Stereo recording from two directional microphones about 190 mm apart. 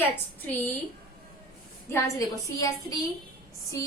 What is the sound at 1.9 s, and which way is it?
A woman's voice, 15° left (ahead or behind).